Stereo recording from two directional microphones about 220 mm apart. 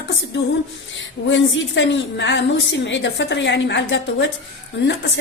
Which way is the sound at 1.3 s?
55° left (ahead or behind).